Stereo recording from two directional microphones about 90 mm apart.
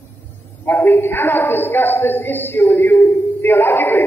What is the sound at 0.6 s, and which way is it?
A woman's voice, 20° left (ahead or behind).